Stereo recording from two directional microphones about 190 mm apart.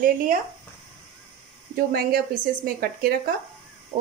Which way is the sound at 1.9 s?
55° right (ahead or behind).